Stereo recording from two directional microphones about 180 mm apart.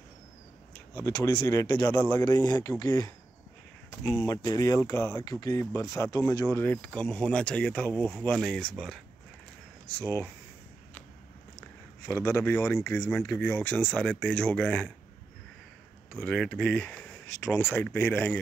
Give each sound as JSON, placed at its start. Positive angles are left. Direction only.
{"t": 0.9, "sound": "speech", "side_deg": 15}
{"t": 2.2, "sound": "speech", "side_deg": 20}
{"t": 4.3, "sound": "speech", "side_deg": 20}
{"t": 12.1, "sound": "speech", "side_deg": 15}
{"t": 16.1, "sound": "speech", "side_deg": 5}